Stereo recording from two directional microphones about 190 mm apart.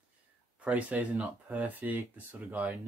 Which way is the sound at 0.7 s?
5° right (ahead or behind).